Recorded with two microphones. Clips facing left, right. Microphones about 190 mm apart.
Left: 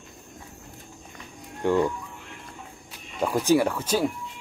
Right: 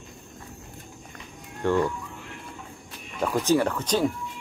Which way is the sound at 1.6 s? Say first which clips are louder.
Left 1 dB; 15° left (ahead or behind).